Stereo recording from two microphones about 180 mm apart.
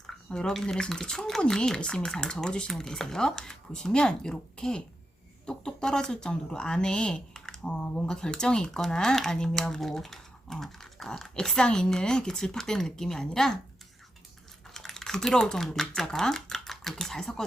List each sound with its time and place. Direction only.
0.3 s speech: 5° left (ahead or behind)
14.7 s speech: centre (ahead or behind)